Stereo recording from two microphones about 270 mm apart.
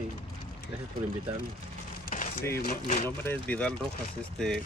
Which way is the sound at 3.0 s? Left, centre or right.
Centre.